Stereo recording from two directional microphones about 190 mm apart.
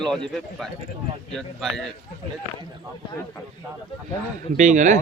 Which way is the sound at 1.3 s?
5° left (ahead or behind).